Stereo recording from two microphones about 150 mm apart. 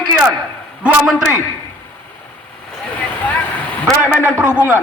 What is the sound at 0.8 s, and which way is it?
Speech, 5° right (ahead or behind).